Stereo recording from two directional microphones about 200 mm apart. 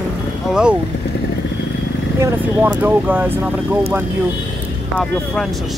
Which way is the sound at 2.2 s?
10° right (ahead or behind).